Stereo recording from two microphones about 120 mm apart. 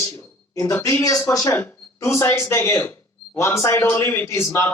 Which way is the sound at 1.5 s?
20° left (ahead or behind).